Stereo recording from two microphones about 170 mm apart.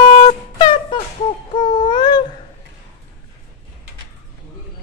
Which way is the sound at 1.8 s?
25° left (ahead or behind).